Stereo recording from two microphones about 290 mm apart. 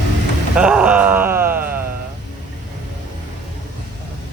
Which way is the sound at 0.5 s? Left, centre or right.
Centre.